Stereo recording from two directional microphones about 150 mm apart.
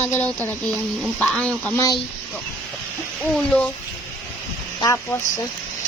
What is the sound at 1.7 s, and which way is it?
Speech, 20° left (ahead or behind).